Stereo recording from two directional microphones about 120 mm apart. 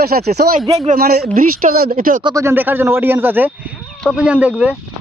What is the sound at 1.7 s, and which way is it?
Speech, 80° right.